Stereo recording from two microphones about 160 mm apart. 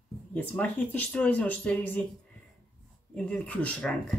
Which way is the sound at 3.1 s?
5° left (ahead or behind).